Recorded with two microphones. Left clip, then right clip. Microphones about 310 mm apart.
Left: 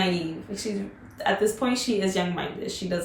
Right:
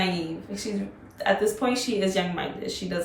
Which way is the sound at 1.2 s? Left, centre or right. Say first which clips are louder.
Right 1 dB; centre.